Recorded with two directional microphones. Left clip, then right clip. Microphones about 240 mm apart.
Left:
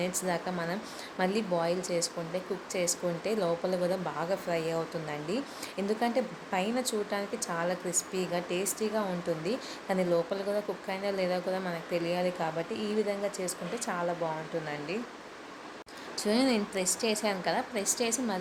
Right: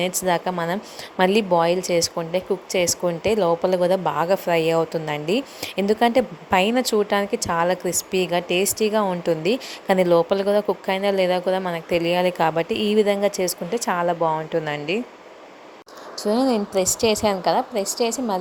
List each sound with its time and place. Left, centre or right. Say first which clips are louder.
0.0 s speech: right 11 dB; right
16.2 s a woman's voice: right 8 dB; centre